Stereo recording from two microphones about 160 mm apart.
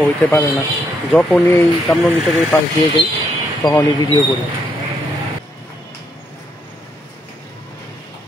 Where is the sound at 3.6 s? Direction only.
20° left (ahead or behind).